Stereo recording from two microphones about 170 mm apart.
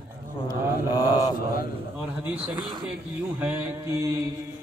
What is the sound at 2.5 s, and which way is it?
Speech, 25° right (ahead or behind).